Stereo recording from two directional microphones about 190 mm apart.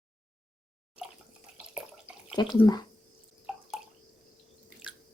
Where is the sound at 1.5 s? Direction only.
5° right (ahead or behind).